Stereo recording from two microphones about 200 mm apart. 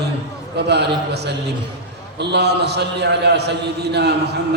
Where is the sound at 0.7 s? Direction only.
55° right (ahead or behind).